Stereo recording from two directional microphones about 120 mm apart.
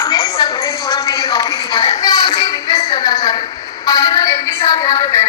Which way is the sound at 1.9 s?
30° left (ahead or behind).